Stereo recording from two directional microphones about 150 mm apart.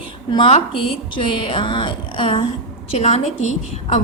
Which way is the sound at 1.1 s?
35° left (ahead or behind).